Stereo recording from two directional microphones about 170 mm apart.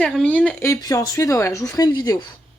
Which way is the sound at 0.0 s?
5° left (ahead or behind).